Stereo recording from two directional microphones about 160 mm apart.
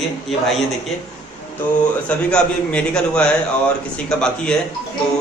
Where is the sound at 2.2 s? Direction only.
5° left (ahead or behind).